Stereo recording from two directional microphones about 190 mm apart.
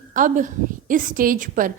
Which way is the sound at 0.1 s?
45° right (ahead or behind).